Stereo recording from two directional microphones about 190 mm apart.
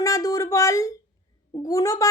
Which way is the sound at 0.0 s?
20° left (ahead or behind).